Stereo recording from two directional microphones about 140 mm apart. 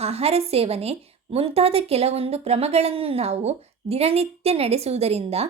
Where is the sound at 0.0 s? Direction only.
45° right (ahead or behind).